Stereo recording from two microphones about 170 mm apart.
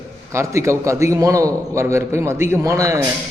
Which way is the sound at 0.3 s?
15° right (ahead or behind).